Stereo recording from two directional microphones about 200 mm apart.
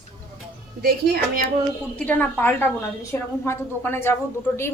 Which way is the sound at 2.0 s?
10° left (ahead or behind).